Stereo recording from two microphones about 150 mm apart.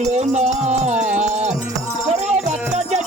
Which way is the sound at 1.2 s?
50° right (ahead or behind).